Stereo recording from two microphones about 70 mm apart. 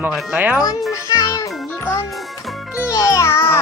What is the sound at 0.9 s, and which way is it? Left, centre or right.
Music, left.